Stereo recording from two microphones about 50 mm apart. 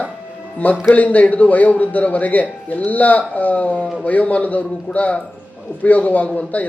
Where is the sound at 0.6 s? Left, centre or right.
Left.